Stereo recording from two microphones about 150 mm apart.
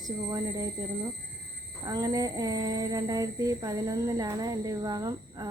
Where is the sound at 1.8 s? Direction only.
25° right (ahead or behind).